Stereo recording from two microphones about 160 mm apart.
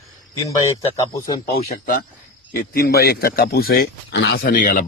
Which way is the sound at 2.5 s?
75° left (ahead or behind).